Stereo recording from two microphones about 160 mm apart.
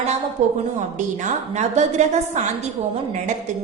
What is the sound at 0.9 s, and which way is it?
A woman's voice, 50° right (ahead or behind).